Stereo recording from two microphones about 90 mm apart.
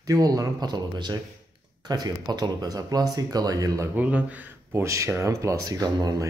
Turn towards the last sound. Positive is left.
turn(degrees=-45)  # may be behind; listen again after turning